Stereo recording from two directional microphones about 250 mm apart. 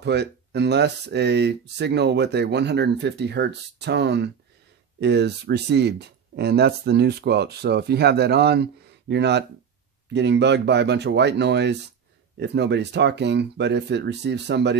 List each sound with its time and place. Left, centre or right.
0.0 s speech: right